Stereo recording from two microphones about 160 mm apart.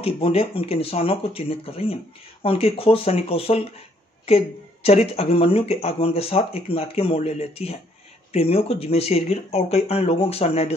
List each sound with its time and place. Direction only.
0.0 s speech: 35° left (ahead or behind)